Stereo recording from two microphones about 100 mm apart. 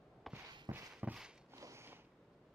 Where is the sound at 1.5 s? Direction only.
30° right (ahead or behind).